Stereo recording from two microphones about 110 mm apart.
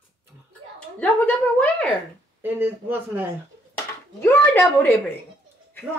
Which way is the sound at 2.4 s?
15° right (ahead or behind).